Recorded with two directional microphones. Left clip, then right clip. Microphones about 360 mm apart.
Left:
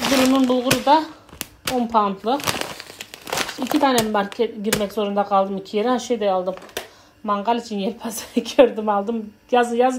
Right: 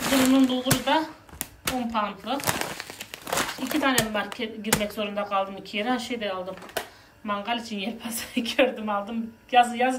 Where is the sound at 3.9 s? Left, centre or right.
Centre.